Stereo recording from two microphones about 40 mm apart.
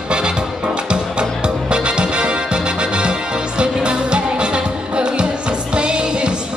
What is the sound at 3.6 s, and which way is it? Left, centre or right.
Music, right.